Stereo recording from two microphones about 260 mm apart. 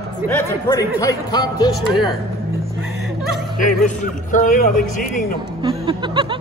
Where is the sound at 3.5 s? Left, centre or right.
Left.